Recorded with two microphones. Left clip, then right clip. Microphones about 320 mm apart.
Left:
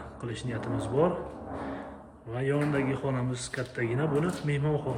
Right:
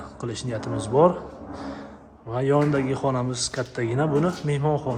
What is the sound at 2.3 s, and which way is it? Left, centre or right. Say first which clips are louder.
Speech: right 8 dB; centre.